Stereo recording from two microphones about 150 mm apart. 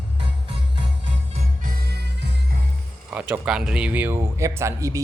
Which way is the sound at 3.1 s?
10° right (ahead or behind).